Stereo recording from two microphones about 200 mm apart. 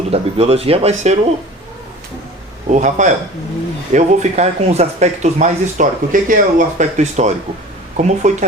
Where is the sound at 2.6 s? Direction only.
35° right (ahead or behind).